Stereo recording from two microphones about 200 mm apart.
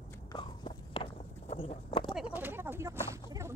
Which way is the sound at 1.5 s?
30° left (ahead or behind).